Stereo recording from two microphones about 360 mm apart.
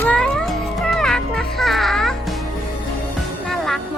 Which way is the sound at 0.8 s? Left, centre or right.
Centre.